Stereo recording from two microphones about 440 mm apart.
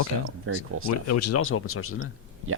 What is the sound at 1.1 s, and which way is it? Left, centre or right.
Speech, left.